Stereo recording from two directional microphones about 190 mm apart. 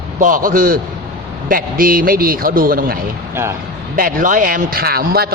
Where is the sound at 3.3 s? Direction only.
15° right (ahead or behind).